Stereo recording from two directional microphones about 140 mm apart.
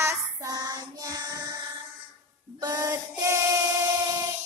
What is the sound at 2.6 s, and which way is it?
Female singing, 25° right (ahead or behind).